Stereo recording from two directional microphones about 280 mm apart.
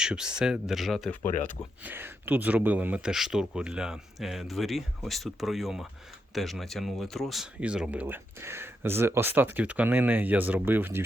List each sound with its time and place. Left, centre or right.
0.0 s speech: centre